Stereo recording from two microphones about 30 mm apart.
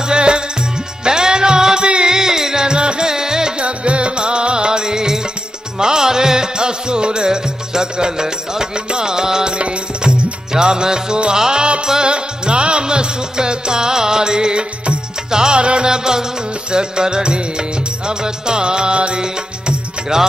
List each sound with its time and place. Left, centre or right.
0.0 s music: right
2.8 s music: right
3.1 s music: centre
3.5 s music: right; by 11.6 s centre
11.6 s music: right
15.6 s music: right
15.9 s music: right